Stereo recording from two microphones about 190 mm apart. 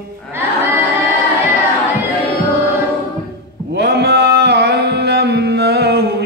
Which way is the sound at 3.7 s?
55° right (ahead or behind).